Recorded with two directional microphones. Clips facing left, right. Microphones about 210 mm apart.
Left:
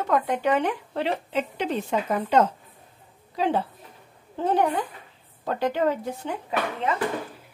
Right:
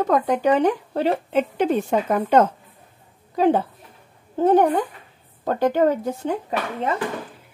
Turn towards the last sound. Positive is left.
turn(degrees=-40)  # may be behind; listen again after turning